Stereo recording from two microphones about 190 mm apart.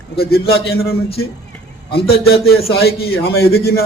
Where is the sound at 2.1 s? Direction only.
55° left (ahead or behind).